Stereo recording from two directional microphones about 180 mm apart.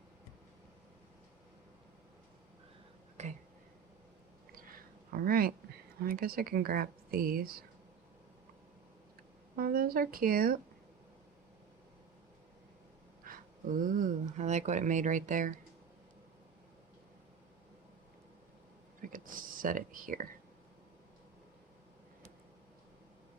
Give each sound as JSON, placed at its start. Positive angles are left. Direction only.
{"t": 3.2, "sound": "a sound", "side_deg": -40}
{"t": 5.1, "sound": "speech", "side_deg": -55}
{"t": 9.6, "sound": "speech", "side_deg": -55}
{"t": 13.2, "sound": "speech", "side_deg": -50}
{"t": 19.1, "sound": "speech", "side_deg": -50}